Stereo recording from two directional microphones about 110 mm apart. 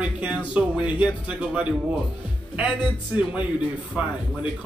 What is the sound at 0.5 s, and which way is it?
A man's voice, 10° right (ahead or behind).